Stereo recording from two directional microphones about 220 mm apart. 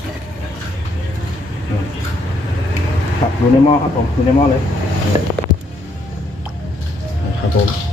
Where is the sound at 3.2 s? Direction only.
30° left (ahead or behind).